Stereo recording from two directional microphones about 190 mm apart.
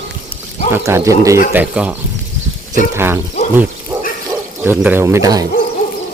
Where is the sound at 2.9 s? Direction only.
10° right (ahead or behind).